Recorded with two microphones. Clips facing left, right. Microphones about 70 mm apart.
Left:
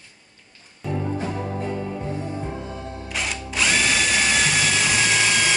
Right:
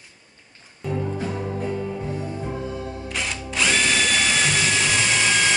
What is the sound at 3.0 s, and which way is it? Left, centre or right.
Drill, centre.